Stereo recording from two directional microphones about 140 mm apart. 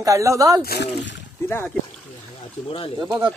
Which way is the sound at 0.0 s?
20° right (ahead or behind).